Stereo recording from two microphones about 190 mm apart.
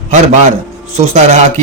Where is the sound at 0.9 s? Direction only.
35° right (ahead or behind).